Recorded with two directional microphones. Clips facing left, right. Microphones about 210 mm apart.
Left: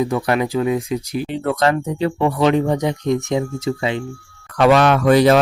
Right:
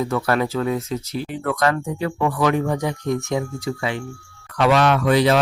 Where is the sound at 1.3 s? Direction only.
25° left (ahead or behind).